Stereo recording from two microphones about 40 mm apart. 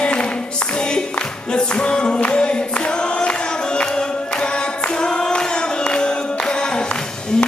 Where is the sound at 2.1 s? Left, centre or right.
Left.